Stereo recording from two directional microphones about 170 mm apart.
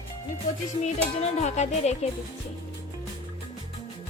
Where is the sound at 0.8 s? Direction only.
40° left (ahead or behind).